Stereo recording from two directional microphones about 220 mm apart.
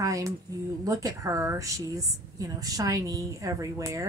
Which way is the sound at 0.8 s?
15° right (ahead or behind).